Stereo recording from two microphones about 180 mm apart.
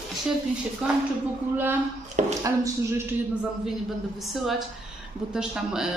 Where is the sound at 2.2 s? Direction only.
45° right (ahead or behind).